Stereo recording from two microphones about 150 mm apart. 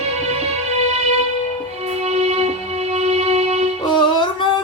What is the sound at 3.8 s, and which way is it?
Music, 30° left (ahead or behind).